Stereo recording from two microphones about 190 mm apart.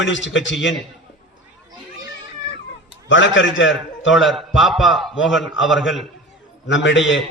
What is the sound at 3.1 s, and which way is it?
A man's voice, 80° left.